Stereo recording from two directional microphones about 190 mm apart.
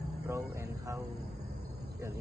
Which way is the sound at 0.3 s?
15° right (ahead or behind).